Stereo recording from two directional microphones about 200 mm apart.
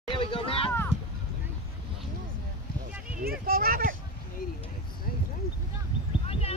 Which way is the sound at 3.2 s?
45° right (ahead or behind).